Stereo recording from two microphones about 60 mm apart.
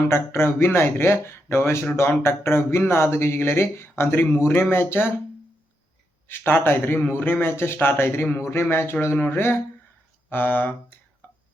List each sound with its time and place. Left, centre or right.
0.1 s a man's voice: left
6.2 s a man's voice: left
11.2 s whispering: left